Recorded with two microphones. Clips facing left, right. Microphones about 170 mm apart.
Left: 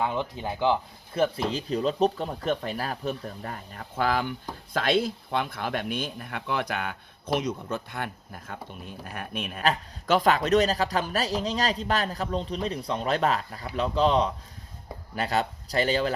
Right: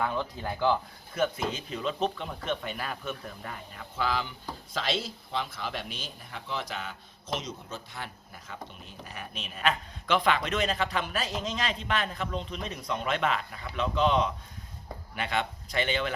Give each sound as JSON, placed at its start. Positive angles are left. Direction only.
{"t": 0.0, "sound": "speech", "side_deg": 20}
{"t": 1.1, "sound": "a man's voice", "side_deg": 30}
{"t": 9.6, "sound": "a man's voice", "side_deg": 40}